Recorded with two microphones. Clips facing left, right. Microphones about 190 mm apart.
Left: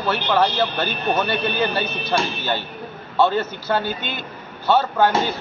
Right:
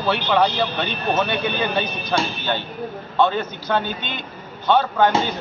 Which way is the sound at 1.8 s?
5° left (ahead or behind).